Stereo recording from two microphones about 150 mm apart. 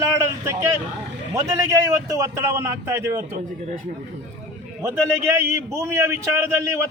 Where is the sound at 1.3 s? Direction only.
20° right (ahead or behind).